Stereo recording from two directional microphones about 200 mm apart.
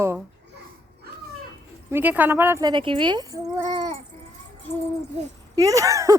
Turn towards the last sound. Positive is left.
turn(degrees=-15)  # may be behind; listen again after turning